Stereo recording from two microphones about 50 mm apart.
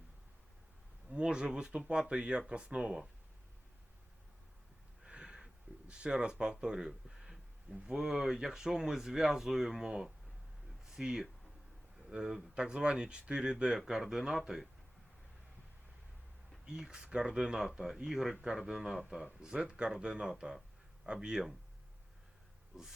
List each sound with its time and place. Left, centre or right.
1.1 s speech: centre
5.0 s a sound: centre
5.9 s speech: centre
16.6 s speech: centre
19.4 s speech: centre